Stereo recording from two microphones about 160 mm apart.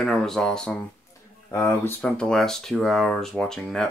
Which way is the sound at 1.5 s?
15° left (ahead or behind).